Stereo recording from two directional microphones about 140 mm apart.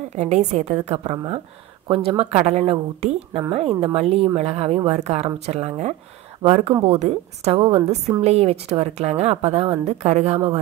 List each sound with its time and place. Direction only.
0.1 s a woman's voice: 55° right (ahead or behind)